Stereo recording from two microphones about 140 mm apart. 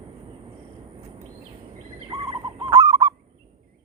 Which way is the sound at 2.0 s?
35° right (ahead or behind).